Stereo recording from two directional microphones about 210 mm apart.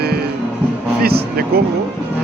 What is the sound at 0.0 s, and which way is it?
Music, 50° right (ahead or behind).